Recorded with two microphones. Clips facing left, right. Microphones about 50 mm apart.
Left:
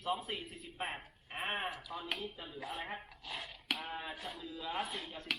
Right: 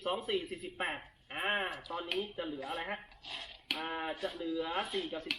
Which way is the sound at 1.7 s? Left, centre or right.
Centre.